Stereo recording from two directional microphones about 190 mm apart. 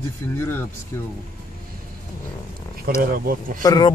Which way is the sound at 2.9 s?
50° right (ahead or behind).